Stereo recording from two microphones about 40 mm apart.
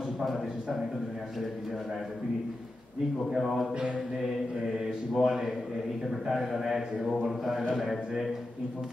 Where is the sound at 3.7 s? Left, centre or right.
Right.